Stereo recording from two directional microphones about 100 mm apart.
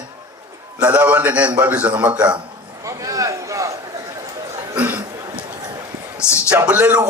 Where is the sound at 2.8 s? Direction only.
35° right (ahead or behind).